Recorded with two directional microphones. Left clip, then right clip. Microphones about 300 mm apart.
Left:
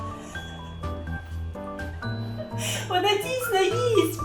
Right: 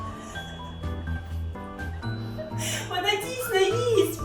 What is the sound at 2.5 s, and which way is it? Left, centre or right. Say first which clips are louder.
Music: left 4 dB; centre.